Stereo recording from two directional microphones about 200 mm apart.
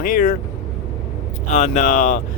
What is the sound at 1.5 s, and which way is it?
Speech, 35° left (ahead or behind).